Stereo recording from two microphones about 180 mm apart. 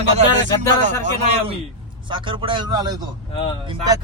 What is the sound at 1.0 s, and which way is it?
Speech, 40° right (ahead or behind).